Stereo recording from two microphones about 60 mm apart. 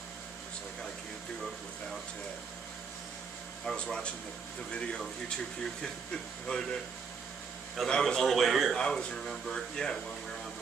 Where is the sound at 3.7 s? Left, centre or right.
Centre.